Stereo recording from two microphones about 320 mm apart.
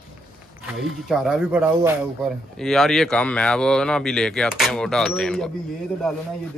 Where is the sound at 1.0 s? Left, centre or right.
Centre.